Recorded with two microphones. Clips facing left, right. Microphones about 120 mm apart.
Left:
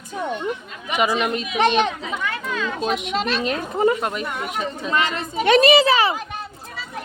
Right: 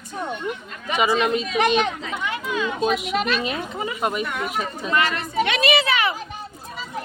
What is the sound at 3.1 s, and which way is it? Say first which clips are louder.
Speech: even; 30° left (ahead or behind).